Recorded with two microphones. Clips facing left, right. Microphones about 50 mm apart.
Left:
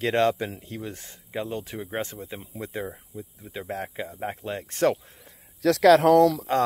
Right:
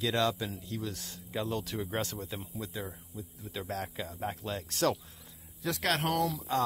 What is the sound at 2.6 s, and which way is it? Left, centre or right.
Speech, left.